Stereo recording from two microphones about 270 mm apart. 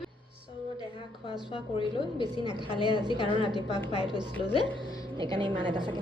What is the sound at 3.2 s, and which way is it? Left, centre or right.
Speech, centre.